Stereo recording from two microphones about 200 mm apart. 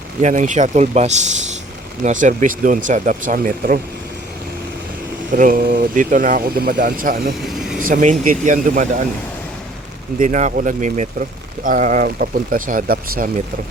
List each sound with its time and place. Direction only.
0.2 s speech: 40° right (ahead or behind)
5.3 s speech: 45° right (ahead or behind)
7.4 s vehicle: centre (ahead or behind)
7.8 s speech: 45° right (ahead or behind)
10.2 s speech: 40° right (ahead or behind)